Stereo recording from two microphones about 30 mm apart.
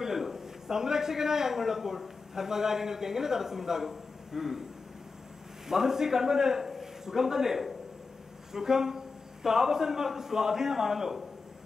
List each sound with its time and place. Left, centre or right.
0.0 s a man's voice: centre
5.7 s a man's voice: centre